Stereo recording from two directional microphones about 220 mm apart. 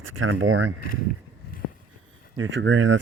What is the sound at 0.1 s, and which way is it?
Speech, 60° right (ahead or behind).